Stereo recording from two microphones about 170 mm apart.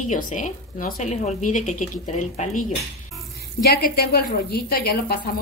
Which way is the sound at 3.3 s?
65° left (ahead or behind).